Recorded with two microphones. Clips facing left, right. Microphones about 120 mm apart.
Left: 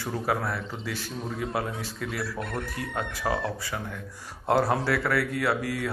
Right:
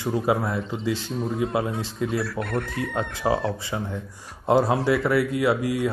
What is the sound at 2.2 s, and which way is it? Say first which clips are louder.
Chicken: right 5 dB; 65° right (ahead or behind).